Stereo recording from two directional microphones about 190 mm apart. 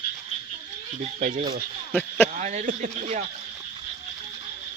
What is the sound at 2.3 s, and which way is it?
Speech, 35° right (ahead or behind).